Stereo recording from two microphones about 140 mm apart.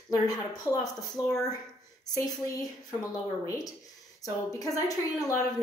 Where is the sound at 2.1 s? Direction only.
25° left (ahead or behind).